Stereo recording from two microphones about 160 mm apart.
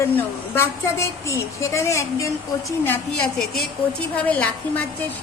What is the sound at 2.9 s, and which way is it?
A woman's voice, 5° left (ahead or behind).